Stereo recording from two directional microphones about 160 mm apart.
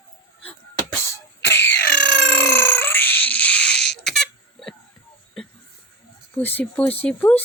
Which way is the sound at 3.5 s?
90° left.